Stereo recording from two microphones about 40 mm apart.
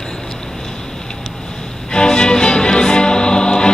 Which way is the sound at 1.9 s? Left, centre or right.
Centre.